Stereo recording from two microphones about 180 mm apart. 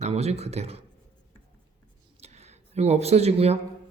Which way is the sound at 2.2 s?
35° right (ahead or behind).